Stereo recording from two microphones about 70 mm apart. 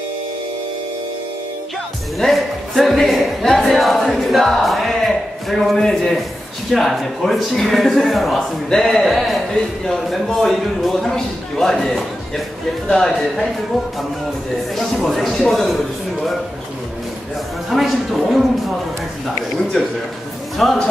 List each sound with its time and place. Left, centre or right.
2.1 s a man's voice: centre
14.8 s a man's voice: centre
17.6 s a man's voice: centre
20.5 s a man's voice: centre